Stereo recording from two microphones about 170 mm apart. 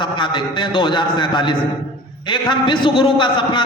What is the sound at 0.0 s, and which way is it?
A man's voice, 30° left (ahead or behind).